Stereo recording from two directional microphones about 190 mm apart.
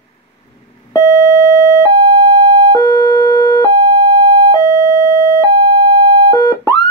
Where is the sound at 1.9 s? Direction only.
40° right (ahead or behind).